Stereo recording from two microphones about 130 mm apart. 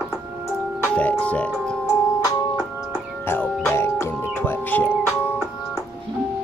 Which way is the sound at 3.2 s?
15° left (ahead or behind).